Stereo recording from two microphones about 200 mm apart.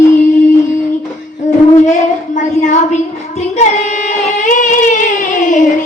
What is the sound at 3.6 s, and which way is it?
Singing, 40° left (ahead or behind).